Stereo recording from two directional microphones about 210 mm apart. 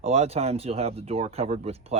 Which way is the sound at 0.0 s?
30° right (ahead or behind).